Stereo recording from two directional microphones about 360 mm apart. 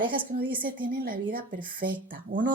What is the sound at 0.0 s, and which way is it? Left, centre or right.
A woman's voice, centre.